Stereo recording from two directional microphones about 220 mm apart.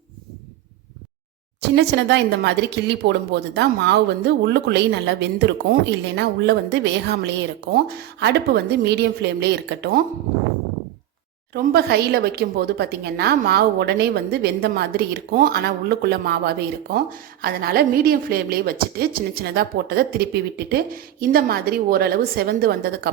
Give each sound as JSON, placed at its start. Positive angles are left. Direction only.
{"t": 1.7, "sound": "a woman's voice", "side_deg": -50}
{"t": 11.5, "sound": "a woman's voice", "side_deg": -45}